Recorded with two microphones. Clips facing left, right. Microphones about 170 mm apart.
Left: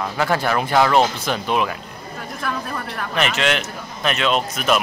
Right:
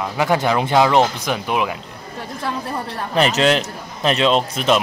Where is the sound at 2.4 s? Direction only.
30° right (ahead or behind).